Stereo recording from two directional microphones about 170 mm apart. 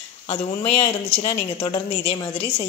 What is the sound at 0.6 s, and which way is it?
Speech, 30° left (ahead or behind).